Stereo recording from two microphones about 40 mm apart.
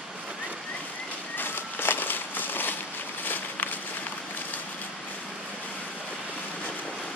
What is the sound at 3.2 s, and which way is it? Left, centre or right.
Walk, left.